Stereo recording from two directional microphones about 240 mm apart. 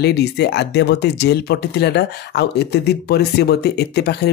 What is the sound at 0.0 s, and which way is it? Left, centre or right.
Speech, left.